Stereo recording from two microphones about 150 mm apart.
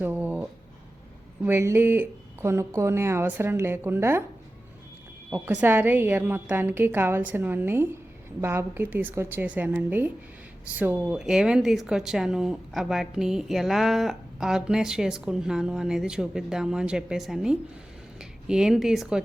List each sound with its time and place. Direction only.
0.0 s a sound: 10° right (ahead or behind)
1.5 s speech: 15° right (ahead or behind)
5.3 s a woman's voice: 15° right (ahead or behind)